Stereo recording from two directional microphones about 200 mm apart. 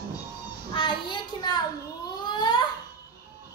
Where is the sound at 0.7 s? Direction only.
25° left (ahead or behind).